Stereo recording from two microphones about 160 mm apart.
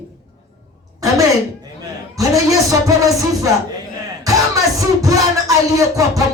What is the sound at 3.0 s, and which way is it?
Music, 20° right (ahead or behind).